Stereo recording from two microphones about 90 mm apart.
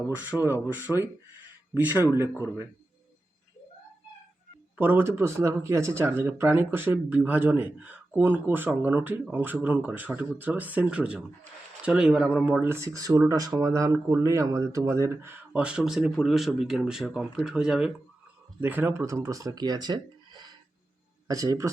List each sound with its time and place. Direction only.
0.2 s speech: 20° right (ahead or behind)
4.8 s speech: 20° right (ahead or behind)
12.5 s speech: 25° right (ahead or behind)
15.5 s speech: 10° right (ahead or behind)
18.6 s speech: 20° right (ahead or behind)
19.0 s speech: 35° right (ahead or behind); by 20.5 s 55° right (ahead or behind)
21.2 s speech: 40° right (ahead or behind)